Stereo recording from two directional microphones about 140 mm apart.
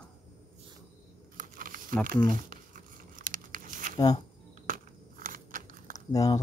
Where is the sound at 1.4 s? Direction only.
75° right (ahead or behind).